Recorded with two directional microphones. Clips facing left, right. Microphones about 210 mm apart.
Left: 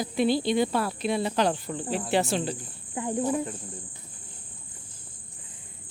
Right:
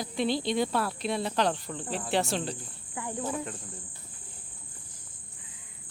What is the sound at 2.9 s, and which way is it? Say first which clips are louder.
Speech: left 7 dB; 20° left (ahead or behind).